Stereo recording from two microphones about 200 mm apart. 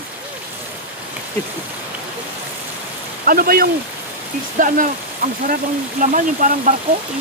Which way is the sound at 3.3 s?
45° right (ahead or behind).